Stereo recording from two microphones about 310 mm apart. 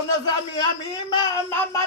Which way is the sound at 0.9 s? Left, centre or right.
Centre.